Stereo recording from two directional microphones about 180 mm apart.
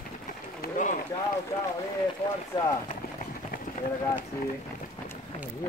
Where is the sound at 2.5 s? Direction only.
25° left (ahead or behind).